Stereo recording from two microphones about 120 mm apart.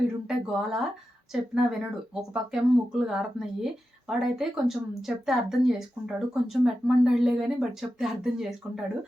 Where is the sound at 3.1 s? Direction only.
5° right (ahead or behind).